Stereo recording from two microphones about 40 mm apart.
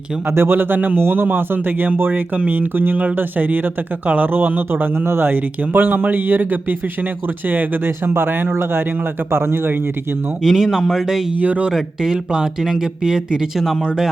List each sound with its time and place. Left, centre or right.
0.3 s speech: right
5.3 s speech: right
7.9 s speech: right
9.3 s speech: right
10.4 s speech: centre
11.3 s speech: right
12.1 s speech: centre